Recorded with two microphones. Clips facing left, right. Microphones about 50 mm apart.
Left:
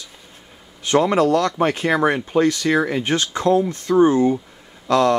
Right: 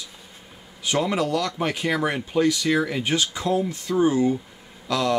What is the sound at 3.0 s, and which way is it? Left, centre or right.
Speech, left.